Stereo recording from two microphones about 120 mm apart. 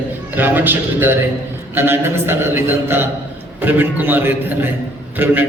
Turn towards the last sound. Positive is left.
turn(degrees=-15)  # may be behind; listen again after turning